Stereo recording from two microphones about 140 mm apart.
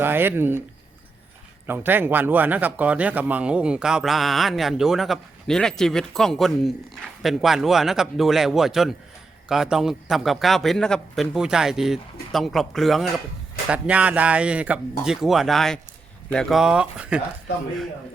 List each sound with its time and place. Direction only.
0.0 s speech: 15° right (ahead or behind)
1.6 s speech: 15° right (ahead or behind)